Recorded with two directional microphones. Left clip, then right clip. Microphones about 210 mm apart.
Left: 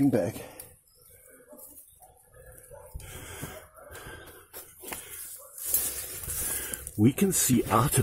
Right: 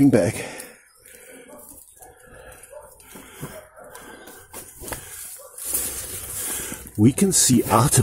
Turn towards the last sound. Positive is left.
turn(degrees=-10)  # may be behind; listen again after turning